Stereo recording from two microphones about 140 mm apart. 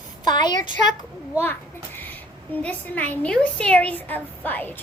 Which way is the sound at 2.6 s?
10° left (ahead or behind).